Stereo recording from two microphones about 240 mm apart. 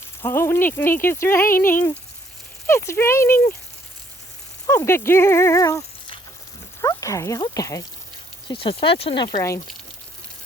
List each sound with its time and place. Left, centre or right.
0.2 s speech: centre
4.6 s speech: centre